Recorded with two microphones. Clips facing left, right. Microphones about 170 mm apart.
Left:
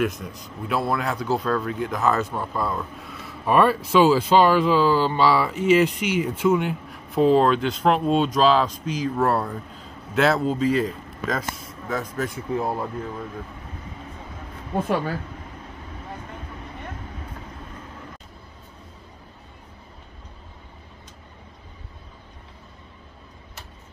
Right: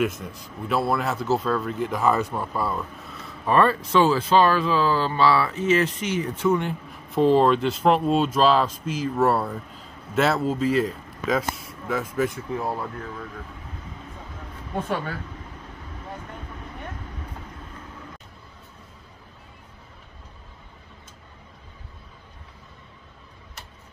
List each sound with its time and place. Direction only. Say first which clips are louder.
0.0 s speech: even; centre (ahead or behind)
12.5 s speech: left 3 dB; 20° left (ahead or behind)